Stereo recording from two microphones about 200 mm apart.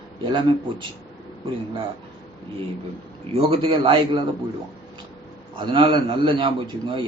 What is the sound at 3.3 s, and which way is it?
Speech, 30° right (ahead or behind).